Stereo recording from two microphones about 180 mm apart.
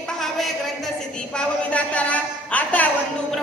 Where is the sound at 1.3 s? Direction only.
5° left (ahead or behind).